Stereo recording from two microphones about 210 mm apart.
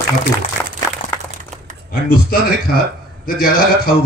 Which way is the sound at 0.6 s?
10° left (ahead or behind).